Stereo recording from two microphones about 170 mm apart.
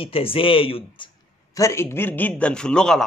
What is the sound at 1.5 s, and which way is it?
Speech, 15° left (ahead or behind).